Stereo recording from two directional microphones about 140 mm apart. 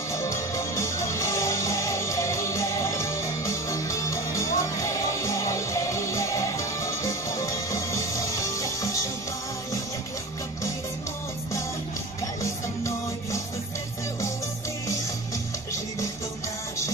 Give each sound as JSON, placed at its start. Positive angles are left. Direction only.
{"t": 0.1, "sound": "music", "side_deg": 20}
{"t": 12.4, "sound": "music", "side_deg": 20}